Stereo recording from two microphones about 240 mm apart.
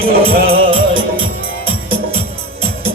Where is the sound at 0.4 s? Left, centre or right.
Right.